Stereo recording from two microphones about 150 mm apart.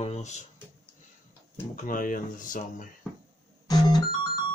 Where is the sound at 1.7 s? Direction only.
65° left (ahead or behind).